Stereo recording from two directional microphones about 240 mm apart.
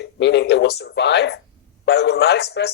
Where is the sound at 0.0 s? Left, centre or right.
Left.